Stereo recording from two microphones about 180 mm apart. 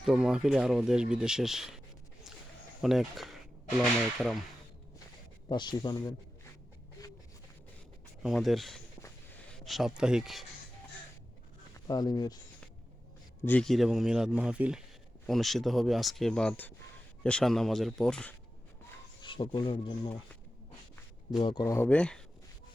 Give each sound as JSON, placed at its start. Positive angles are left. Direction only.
{"t": 0.0, "sound": "a man's voice", "side_deg": -5}
{"t": 2.8, "sound": "a man's voice", "side_deg": 0}
{"t": 5.5, "sound": "speech", "side_deg": 25}
{"t": 8.2, "sound": "a man's voice", "side_deg": 0}
{"t": 11.9, "sound": "speech", "side_deg": 20}
{"t": 13.4, "sound": "a man's voice", "side_deg": 5}
{"t": 19.2, "sound": "speech", "side_deg": 25}
{"t": 21.4, "sound": "speech", "side_deg": 20}
{"t": 21.8, "sound": "a man's voice", "side_deg": 5}